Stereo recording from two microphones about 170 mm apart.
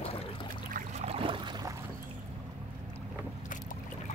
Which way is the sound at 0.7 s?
55° right (ahead or behind).